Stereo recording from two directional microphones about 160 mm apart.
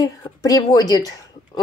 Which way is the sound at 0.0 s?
25° left (ahead or behind).